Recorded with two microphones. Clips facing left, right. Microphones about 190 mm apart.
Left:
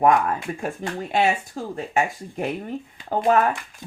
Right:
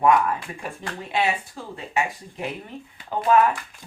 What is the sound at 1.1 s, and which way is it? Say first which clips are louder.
Speech: left 3 dB; 45° left (ahead or behind).